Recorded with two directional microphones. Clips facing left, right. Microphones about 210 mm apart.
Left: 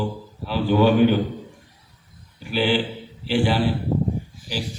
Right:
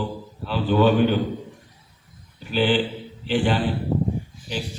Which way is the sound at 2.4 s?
10° left (ahead or behind).